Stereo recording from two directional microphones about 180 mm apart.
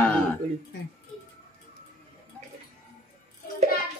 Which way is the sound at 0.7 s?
80° left.